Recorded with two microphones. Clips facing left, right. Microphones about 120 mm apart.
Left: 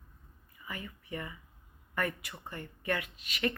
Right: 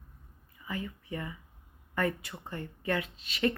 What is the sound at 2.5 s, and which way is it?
Speech, 15° right (ahead or behind).